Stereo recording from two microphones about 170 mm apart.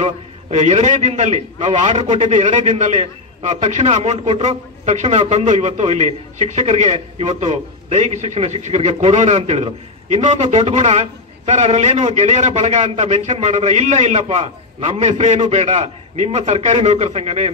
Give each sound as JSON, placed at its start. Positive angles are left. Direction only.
{"t": 0.0, "sound": "a man's voice", "side_deg": -40}